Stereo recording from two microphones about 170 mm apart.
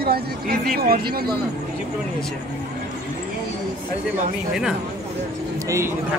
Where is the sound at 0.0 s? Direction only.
65° right (ahead or behind).